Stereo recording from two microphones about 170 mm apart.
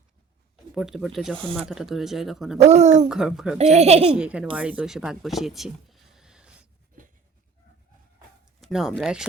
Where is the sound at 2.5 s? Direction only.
40° right (ahead or behind).